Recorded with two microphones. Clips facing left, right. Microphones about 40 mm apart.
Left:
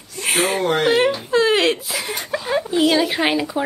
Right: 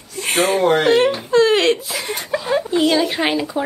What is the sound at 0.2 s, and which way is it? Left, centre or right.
Speech, centre.